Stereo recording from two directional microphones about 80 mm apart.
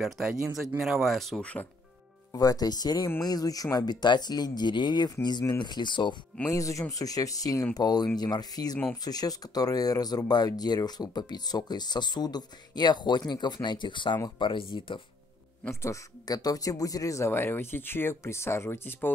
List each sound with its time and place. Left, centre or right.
0.0 s speech: centre
1.4 s speech: centre
2.3 s speech: left
6.5 s speech: left
7.7 s speech: left
15.7 s speech: left
16.3 s speech: left
17.3 s speech: left